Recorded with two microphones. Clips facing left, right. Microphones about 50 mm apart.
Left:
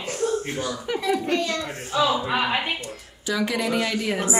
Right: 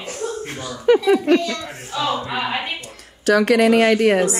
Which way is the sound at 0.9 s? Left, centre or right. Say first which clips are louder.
Right 16 dB; right.